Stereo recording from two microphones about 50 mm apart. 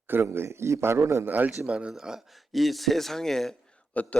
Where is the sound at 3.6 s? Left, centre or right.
Left.